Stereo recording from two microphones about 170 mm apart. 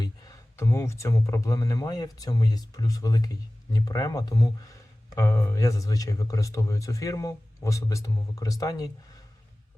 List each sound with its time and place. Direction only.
0.0 s speech: 20° left (ahead or behind)